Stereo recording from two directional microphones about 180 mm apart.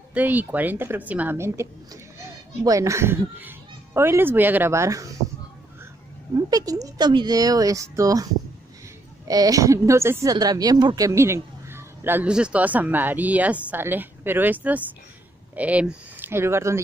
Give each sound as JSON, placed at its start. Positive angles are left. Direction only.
{"t": 0.1, "sound": "speech", "side_deg": -10}
{"t": 6.5, "sound": "speech", "side_deg": -20}
{"t": 9.3, "sound": "speech", "side_deg": -20}